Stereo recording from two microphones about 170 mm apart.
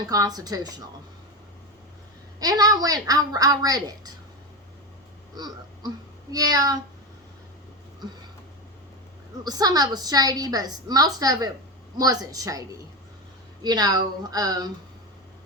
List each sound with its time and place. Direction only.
0.1 s a woman's voice: 20° right (ahead or behind)
2.4 s a woman's voice: 20° right (ahead or behind)
5.3 s a sound: 25° right (ahead or behind)
6.3 s a woman's voice: 20° right (ahead or behind)
9.4 s a woman's voice: 20° right (ahead or behind)